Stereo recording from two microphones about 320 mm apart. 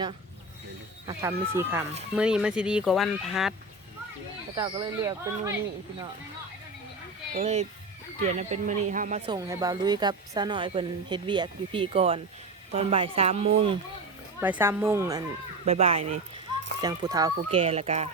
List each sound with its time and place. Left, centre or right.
1.0 s speech: centre
4.5 s speech: centre
7.3 s speech: right
14.4 s speech: centre